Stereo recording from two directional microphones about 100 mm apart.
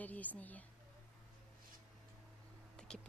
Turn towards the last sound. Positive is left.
turn(degrees=10)  # may be behind; listen again after turning